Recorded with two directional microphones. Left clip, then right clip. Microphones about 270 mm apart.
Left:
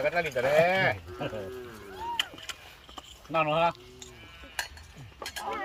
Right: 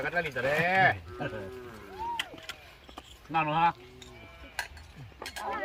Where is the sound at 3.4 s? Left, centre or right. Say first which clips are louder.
Left 1 dB; centre.